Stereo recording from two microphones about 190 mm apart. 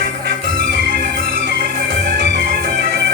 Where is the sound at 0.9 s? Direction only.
45° right (ahead or behind).